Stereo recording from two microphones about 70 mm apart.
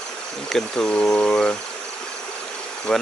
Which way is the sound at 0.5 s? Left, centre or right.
Centre.